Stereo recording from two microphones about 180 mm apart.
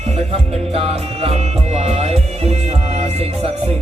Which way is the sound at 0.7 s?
35° right (ahead or behind).